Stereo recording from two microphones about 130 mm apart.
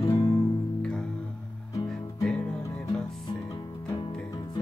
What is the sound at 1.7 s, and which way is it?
Music, 25° left (ahead or behind).